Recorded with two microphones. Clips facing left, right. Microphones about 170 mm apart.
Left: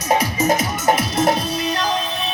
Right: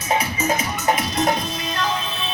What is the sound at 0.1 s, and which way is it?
Music, 40° left (ahead or behind).